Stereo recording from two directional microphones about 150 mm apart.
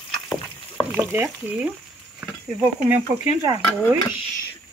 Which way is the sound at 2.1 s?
10° right (ahead or behind).